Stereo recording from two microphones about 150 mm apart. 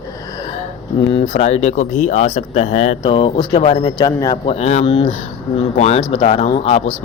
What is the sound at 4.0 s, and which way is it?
Speech, 25° left (ahead or behind).